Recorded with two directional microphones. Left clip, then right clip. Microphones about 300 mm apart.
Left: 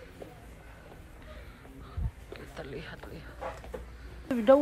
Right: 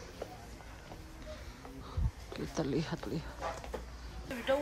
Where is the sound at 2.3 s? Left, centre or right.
Right.